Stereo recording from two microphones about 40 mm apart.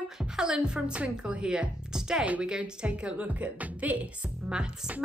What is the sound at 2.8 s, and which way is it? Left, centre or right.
A woman's voice, right.